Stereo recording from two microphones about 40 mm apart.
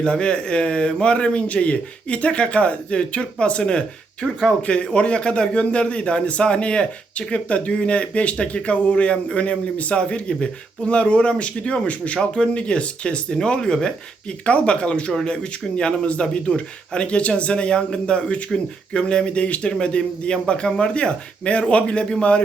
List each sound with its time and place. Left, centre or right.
0.0 s a man's voice: left